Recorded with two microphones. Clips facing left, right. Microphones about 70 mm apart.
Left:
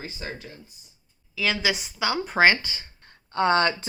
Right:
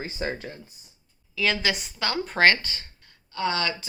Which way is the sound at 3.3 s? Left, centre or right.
Left.